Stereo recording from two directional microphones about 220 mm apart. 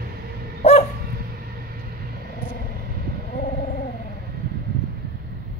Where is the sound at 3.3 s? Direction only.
35° left (ahead or behind).